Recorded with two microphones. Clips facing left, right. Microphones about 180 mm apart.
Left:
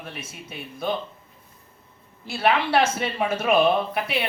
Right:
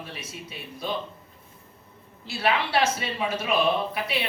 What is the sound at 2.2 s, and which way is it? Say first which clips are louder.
A man's voice: left 4 dB; 50° left (ahead or behind).